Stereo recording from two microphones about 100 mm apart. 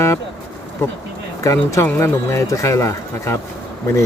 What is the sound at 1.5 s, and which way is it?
Speech, 30° left (ahead or behind).